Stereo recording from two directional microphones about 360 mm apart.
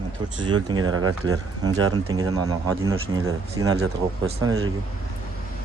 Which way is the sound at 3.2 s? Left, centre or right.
Right.